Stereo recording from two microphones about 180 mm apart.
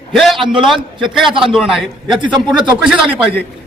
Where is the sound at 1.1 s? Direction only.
Centre (ahead or behind).